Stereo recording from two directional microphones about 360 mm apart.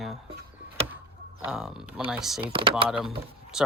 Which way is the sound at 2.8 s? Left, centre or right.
Centre.